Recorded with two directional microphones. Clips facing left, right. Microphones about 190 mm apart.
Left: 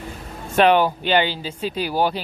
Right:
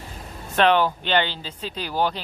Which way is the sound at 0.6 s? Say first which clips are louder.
Left 3 dB; 10° left (ahead or behind).